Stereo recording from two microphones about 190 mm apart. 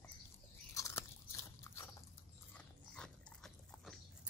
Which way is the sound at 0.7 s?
15° left (ahead or behind).